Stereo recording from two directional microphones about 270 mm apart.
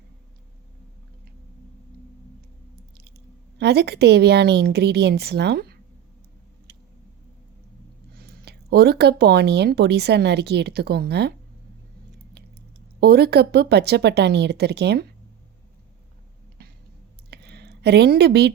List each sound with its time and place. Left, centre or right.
3.6 s speech: right
6.7 s vehicle: right
8.2 s speech: right
13.0 s speech: right
16.6 s a sound: right